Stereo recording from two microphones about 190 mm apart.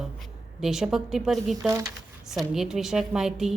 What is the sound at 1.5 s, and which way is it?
Speech, 15° right (ahead or behind).